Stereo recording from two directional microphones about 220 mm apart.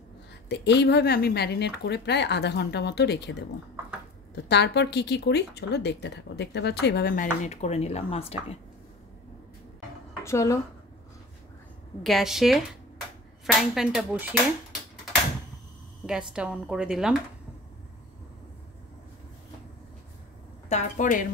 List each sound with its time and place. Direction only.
0.5 s speech: 50° left (ahead or behind)
4.5 s speech: 50° left (ahead or behind); by 8.5 s 25° left (ahead or behind)
10.2 s speech: 15° left (ahead or behind)
12.0 s speech: centre (ahead or behind)
16.1 s speech: 5° right (ahead or behind)
20.6 s a woman's voice: 35° left (ahead or behind)